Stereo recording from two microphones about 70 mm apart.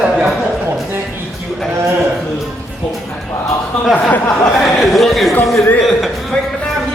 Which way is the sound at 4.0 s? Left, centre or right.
Left.